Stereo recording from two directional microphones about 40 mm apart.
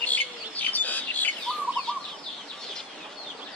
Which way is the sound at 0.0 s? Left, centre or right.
Left.